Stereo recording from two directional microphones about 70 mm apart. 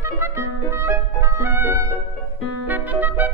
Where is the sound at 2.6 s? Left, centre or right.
Right.